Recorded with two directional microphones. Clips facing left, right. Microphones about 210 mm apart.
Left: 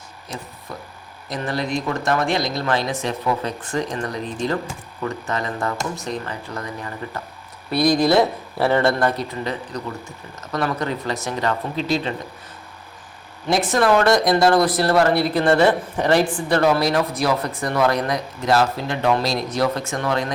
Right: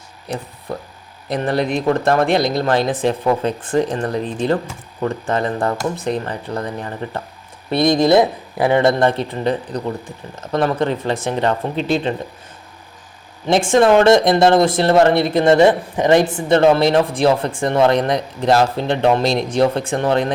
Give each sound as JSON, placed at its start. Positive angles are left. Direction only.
{"t": 1.3, "sound": "speech", "side_deg": -60}
{"t": 1.9, "sound": "speech", "side_deg": -35}
{"t": 13.5, "sound": "speech", "side_deg": -25}